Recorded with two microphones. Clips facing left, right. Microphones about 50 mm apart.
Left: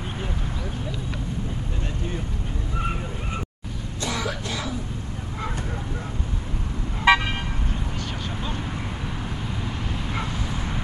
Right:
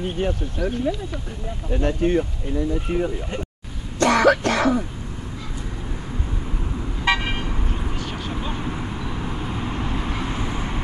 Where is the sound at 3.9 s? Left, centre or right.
Right.